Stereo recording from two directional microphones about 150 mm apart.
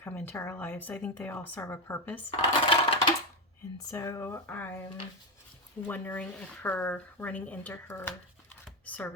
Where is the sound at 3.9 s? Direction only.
20° left (ahead or behind).